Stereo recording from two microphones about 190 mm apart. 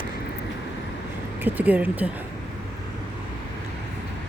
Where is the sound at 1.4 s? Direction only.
10° right (ahead or behind).